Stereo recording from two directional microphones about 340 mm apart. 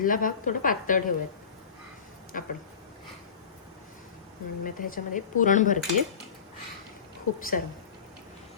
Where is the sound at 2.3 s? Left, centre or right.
Left.